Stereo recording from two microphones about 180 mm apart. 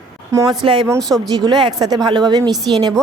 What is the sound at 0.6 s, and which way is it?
Speech, 25° right (ahead or behind).